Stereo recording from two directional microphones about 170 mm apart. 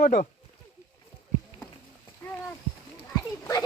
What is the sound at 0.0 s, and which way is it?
Speech, 50° left (ahead or behind).